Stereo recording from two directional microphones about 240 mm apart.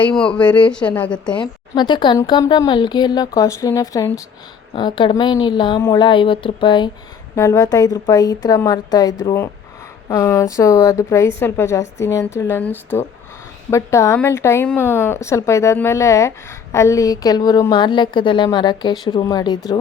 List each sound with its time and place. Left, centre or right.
0.3 s a woman's voice: centre
1.7 s a woman's voice: centre